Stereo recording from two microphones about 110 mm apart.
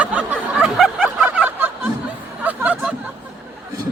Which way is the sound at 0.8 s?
10° right (ahead or behind).